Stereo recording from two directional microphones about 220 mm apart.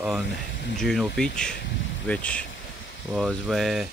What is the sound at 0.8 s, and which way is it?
Speech, centre (ahead or behind).